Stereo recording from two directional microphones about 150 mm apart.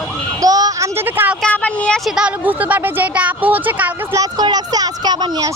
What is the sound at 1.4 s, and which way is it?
Speech, 10° left (ahead or behind).